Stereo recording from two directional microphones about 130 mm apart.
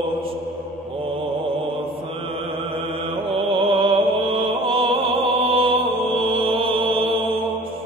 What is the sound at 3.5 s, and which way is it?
Music, 40° right (ahead or behind).